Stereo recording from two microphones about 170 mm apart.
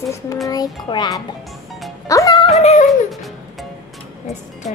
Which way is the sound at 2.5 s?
40° left (ahead or behind).